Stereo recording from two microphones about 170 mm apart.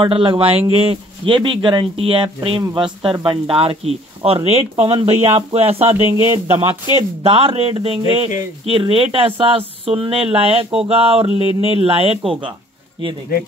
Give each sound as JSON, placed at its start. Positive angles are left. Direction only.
{"t": 0.0, "sound": "speech", "side_deg": -30}
{"t": 6.0, "sound": "speech", "side_deg": -15}
{"t": 7.2, "sound": "speech", "side_deg": -35}